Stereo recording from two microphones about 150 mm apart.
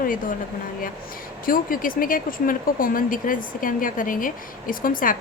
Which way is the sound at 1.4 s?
70° left (ahead or behind).